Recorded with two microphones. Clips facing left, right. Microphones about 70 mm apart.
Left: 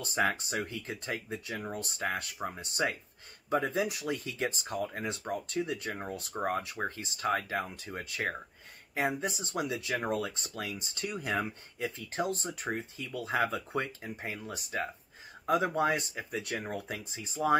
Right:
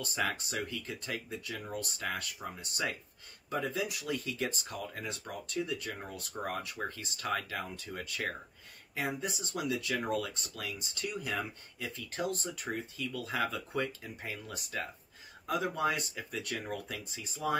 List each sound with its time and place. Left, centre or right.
0.0 s speech: left